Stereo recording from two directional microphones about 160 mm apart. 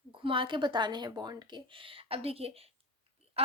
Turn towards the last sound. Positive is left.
turn(degrees=-40)  # may be behind; listen again after turning